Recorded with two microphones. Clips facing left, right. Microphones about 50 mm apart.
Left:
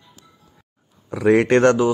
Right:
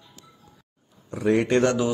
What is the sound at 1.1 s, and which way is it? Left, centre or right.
Speech, left.